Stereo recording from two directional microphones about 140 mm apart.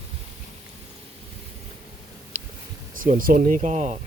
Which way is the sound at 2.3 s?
60° right (ahead or behind).